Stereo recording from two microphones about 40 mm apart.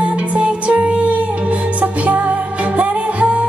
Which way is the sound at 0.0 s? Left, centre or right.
Right.